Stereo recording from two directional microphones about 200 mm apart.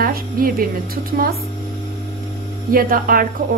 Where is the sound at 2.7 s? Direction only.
45° right (ahead or behind).